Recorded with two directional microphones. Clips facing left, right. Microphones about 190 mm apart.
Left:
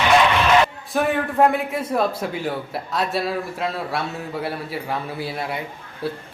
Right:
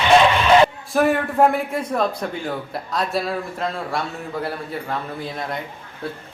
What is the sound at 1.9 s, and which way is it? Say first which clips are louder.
Speech: left 1 dB; 5° left (ahead or behind).